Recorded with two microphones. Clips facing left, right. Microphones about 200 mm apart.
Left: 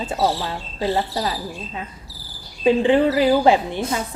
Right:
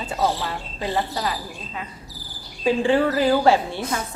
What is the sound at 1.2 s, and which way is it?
A woman's voice, 25° left (ahead or behind).